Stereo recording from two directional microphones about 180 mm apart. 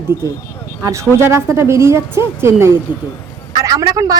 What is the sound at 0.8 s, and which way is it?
Speech, 15° right (ahead or behind).